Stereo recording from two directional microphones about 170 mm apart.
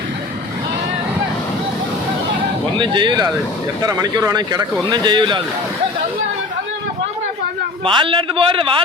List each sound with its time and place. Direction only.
2.7 s speech: 30° right (ahead or behind)
7.9 s a man's voice: 30° right (ahead or behind)